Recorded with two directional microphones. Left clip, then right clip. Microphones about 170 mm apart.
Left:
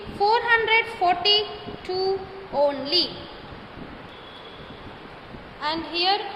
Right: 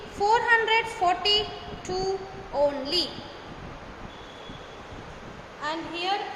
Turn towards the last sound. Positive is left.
turn(degrees=45)  # may be behind; listen again after turning